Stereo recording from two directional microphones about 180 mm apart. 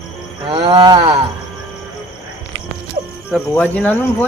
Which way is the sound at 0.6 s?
25° right (ahead or behind).